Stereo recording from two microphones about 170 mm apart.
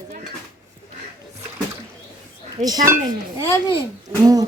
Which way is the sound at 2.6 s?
40° right (ahead or behind).